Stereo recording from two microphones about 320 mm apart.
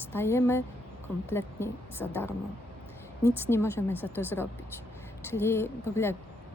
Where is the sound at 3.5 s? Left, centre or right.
Centre.